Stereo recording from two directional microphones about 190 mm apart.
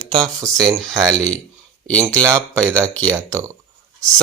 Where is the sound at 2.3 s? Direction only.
15° right (ahead or behind).